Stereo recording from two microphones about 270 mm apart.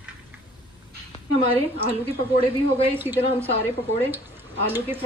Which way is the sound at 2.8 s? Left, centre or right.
Centre.